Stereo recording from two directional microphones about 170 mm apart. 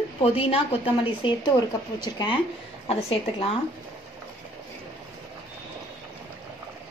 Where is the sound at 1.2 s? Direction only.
30° left (ahead or behind).